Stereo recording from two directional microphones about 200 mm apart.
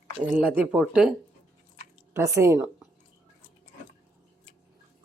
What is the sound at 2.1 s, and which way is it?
Speech, 15° right (ahead or behind).